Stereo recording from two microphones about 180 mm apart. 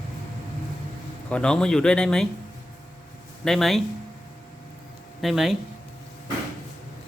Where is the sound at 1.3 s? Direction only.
5° left (ahead or behind).